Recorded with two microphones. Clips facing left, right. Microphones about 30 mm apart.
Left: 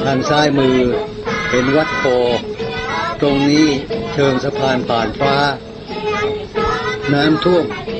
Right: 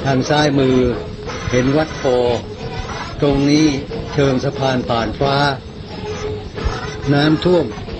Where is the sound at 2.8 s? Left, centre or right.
Left.